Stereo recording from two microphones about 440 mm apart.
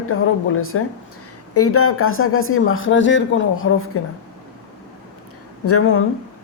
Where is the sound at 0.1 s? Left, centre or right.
Left.